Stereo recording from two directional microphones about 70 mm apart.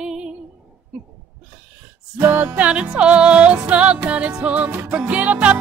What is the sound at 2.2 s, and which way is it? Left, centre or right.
Music, right.